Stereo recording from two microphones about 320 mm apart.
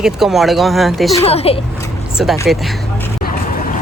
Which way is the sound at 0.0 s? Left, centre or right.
Centre.